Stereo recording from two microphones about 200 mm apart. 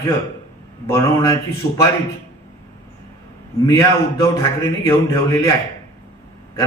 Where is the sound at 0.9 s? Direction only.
15° left (ahead or behind).